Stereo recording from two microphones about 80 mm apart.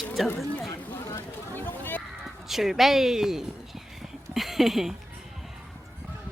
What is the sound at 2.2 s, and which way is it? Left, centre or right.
Speech, centre.